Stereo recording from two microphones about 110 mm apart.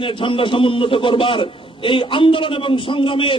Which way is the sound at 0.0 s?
50° left (ahead or behind).